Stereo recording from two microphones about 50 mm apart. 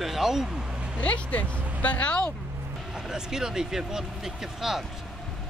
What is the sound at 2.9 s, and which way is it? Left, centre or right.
Speech, centre.